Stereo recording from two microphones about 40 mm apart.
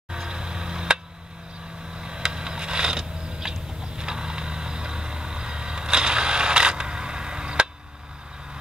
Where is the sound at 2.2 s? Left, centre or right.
Centre.